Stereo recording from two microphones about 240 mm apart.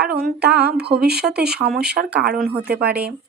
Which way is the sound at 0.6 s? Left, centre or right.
Right.